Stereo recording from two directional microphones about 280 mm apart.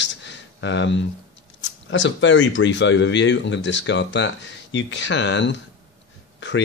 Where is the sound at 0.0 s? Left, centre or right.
Left.